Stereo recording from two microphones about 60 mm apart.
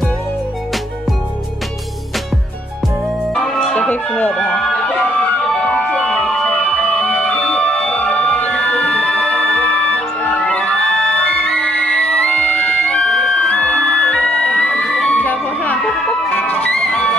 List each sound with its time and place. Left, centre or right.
3.7 s music: centre
4.5 s a sound: centre
5.4 s music: centre
15.1 s music: left
15.8 s music: centre
16.3 s music: left